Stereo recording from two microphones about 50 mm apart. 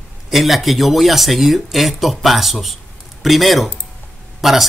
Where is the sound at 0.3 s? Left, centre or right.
Centre.